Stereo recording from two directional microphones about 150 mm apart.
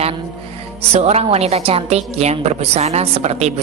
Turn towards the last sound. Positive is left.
turn(degrees=-45)  # may be behind; listen again after turning